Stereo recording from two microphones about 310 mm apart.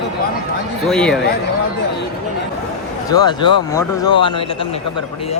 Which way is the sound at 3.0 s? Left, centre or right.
Centre.